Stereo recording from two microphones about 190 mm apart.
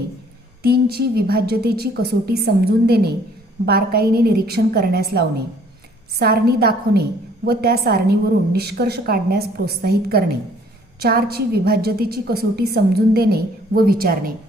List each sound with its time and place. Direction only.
0.6 s a woman's voice: 55° right (ahead or behind)